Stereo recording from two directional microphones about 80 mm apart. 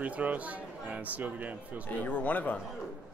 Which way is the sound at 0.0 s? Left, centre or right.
Centre.